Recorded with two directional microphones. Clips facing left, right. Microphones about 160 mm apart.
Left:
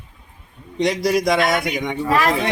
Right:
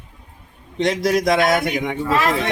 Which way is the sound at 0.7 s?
Centre (ahead or behind).